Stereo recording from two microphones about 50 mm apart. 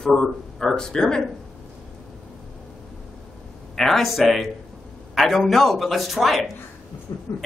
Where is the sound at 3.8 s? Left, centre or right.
Centre.